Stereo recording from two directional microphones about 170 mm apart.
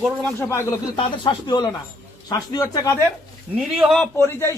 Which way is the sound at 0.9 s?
25° left (ahead or behind).